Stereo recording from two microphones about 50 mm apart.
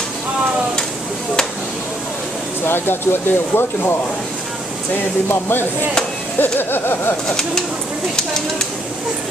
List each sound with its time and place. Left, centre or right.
2.6 s speech: left
4.9 s speech: left
7.2 s speech: centre